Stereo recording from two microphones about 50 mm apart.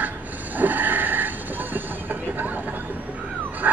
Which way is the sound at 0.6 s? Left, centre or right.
Right.